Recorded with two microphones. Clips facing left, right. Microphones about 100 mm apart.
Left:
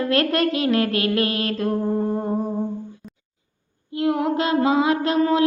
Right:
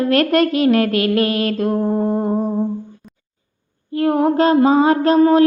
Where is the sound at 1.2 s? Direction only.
30° left (ahead or behind).